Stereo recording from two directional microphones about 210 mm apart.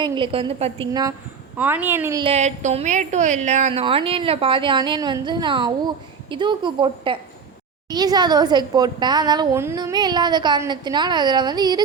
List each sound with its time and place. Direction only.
0.0 s a woman's voice: 25° right (ahead or behind)
1.5 s a woman's voice: 10° right (ahead or behind)
2.2 s a woman's voice: 30° right (ahead or behind)